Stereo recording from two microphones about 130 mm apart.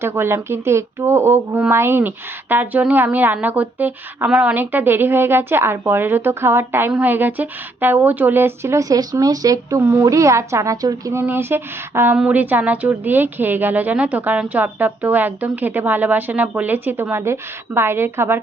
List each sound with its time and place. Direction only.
0.0 s a woman's voice: 20° right (ahead or behind)